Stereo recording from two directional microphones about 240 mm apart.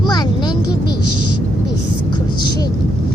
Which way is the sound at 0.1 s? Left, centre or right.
Centre.